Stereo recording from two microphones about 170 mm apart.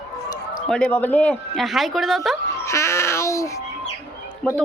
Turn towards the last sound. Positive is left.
turn(degrees=10)  # may be behind; listen again after turning